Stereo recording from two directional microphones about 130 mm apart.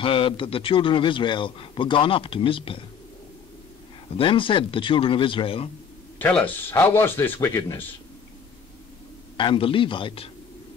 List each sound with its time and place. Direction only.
0.0 s a man's voice: 40° left (ahead or behind)
4.2 s speech: 40° left (ahead or behind)
6.1 s speech: 15° left (ahead or behind)
9.4 s speech: 40° left (ahead or behind)